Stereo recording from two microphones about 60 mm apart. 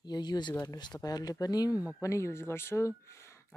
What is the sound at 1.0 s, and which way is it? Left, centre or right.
Speech, left.